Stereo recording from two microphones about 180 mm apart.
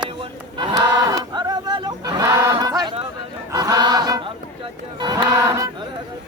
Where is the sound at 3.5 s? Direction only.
20° right (ahead or behind).